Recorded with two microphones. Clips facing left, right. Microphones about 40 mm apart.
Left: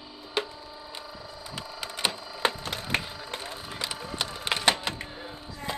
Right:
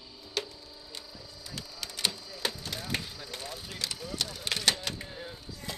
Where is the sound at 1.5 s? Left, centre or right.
Left.